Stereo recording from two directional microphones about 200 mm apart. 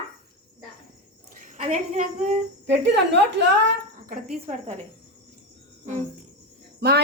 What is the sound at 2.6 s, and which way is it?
Speech, 60° right (ahead or behind).